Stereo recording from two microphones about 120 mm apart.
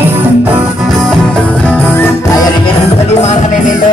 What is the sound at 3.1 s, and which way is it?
Music, 65° left (ahead or behind).